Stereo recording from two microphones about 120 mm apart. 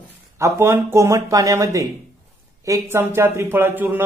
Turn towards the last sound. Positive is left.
turn(degrees=-15)  # may be behind; listen again after turning